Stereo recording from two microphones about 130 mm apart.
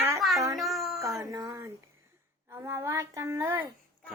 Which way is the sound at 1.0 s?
25° right (ahead or behind).